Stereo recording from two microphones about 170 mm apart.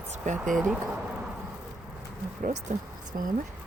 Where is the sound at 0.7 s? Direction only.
5° right (ahead or behind).